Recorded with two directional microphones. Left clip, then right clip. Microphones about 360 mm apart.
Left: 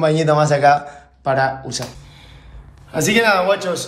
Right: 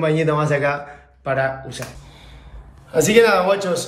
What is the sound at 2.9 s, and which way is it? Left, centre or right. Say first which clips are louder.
Speech: right 1 dB; centre.